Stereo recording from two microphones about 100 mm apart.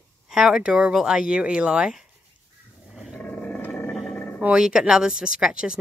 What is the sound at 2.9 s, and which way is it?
Dog, 5° right (ahead or behind).